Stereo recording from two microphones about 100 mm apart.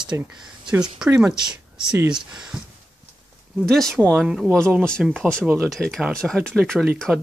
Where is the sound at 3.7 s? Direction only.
5° left (ahead or behind).